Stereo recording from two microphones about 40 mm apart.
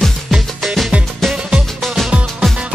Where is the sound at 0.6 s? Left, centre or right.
Centre.